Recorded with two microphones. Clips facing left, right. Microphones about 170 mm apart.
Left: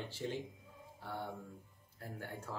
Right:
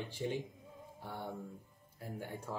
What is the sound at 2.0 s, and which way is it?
Speech, 15° right (ahead or behind).